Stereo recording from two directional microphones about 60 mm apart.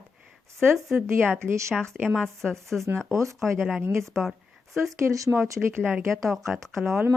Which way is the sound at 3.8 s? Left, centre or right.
Right.